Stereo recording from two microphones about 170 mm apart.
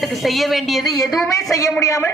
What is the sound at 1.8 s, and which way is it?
Speech, 20° left (ahead or behind).